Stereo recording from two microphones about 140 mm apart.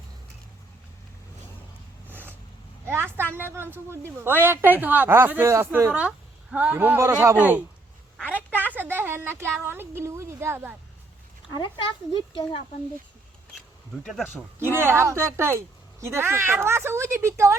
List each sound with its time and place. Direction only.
2.0 s a sound: 15° right (ahead or behind)
2.8 s vehicle: 15° right (ahead or behind)
3.3 s speech: 15° right (ahead or behind)
5.9 s speech: 10° right (ahead or behind)
8.3 s a sound: 10° right (ahead or behind)
9.6 s speech: 15° right (ahead or behind)
12.1 s speech: 35° left (ahead or behind)
14.0 s speech: centre (ahead or behind)
14.8 s speech: 20° right (ahead or behind)